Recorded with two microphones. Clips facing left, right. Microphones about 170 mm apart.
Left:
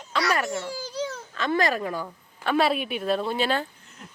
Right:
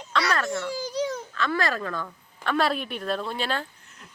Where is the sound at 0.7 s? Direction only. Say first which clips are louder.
Right 3 dB; 15° right (ahead or behind).